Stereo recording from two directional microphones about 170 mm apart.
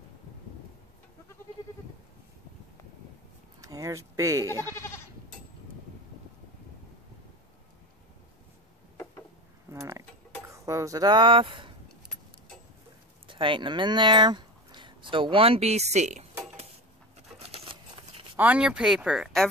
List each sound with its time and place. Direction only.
3.6 s speech: 20° right (ahead or behind)
4.7 s goat: 15° left (ahead or behind)
9.7 s a sound: 15° right (ahead or behind)
10.5 s speech: 20° right (ahead or behind)
13.3 s speech: 30° right (ahead or behind)
17.4 s a sound: 35° right (ahead or behind)
18.3 s speech: 10° right (ahead or behind)